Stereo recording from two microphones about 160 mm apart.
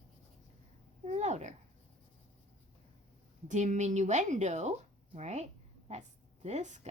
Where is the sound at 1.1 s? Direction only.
45° right (ahead or behind).